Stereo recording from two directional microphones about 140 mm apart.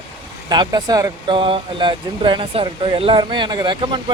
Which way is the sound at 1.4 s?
35° right (ahead or behind).